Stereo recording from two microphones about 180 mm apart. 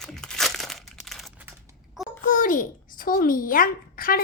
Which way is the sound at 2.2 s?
50° left (ahead or behind).